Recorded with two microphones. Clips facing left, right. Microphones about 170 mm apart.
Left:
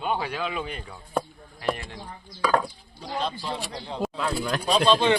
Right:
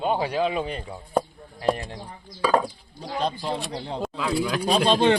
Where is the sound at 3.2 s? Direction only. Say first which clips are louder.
Right 4 dB; 45° right (ahead or behind).